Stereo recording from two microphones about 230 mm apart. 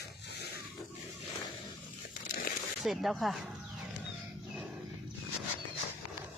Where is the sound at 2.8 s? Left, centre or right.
Centre.